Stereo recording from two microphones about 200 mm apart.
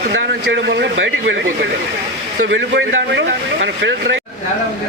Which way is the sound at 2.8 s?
65° right (ahead or behind).